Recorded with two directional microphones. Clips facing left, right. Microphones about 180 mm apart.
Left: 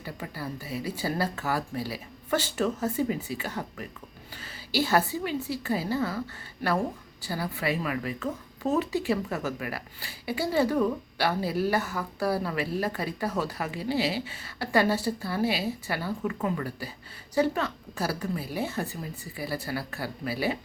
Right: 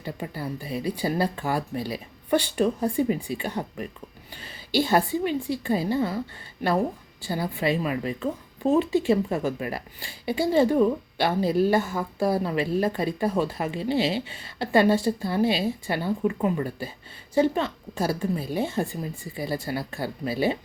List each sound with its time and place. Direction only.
0.0 s a woman's voice: 20° right (ahead or behind)